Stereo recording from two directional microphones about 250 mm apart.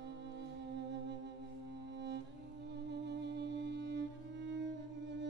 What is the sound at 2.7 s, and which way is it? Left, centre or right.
Music, right.